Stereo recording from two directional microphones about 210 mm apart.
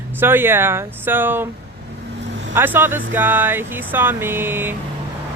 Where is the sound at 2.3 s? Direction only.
55° right (ahead or behind).